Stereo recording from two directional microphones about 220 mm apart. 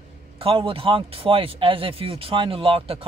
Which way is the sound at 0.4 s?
25° right (ahead or behind).